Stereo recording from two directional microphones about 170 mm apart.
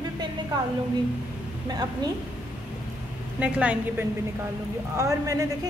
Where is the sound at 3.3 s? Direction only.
5° right (ahead or behind).